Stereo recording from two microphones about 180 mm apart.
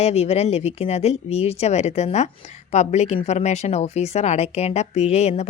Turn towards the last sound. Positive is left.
turn(degrees=40)  # may be behind; listen again after turning